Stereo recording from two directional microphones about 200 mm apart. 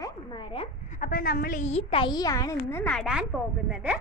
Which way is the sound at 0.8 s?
45° left (ahead or behind).